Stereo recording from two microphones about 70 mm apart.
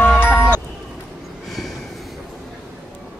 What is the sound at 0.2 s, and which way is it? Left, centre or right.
Music, left.